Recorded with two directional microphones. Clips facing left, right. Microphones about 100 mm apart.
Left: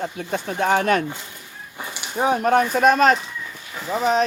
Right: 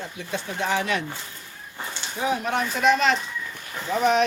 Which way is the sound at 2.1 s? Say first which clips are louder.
Left 7 dB; 50° left (ahead or behind).